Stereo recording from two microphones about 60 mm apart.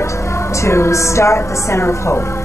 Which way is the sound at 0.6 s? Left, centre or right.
Left.